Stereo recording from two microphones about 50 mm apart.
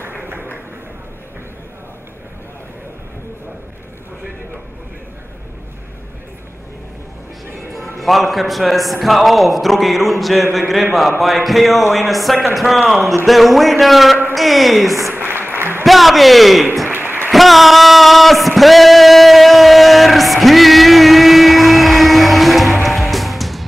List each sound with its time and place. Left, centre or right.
8.0 s a man's voice: centre
15.1 s applause: right
15.8 s a man's voice: centre
16.9 s a sound: right
17.3 s a sound: centre
22.8 s music: centre